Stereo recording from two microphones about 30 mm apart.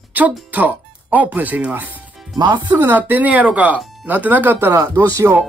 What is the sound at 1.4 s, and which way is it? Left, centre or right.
Speech, right.